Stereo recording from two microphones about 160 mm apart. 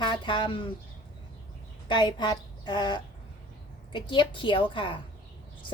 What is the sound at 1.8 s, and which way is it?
A woman's voice, 30° left (ahead or behind).